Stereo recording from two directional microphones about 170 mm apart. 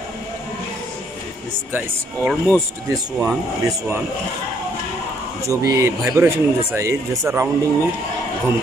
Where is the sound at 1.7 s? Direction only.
10° right (ahead or behind).